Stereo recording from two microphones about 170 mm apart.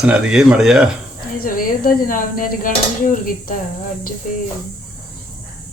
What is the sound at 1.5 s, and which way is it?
Speech, 55° left (ahead or behind).